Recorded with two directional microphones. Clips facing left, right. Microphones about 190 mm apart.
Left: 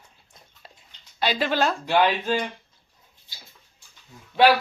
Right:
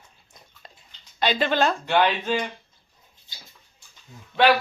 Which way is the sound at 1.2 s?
5° left (ahead or behind).